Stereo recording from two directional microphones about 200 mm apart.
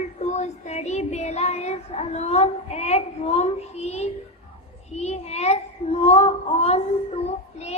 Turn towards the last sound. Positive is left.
turn(degrees=30)  # may be behind; listen again after turning